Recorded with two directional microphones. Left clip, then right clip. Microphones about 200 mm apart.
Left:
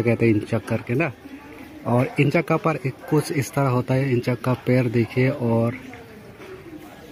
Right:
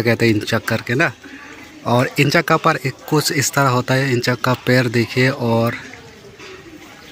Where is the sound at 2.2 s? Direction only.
Centre (ahead or behind).